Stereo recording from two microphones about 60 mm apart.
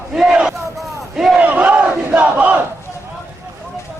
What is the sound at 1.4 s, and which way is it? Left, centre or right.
Battle cry, right.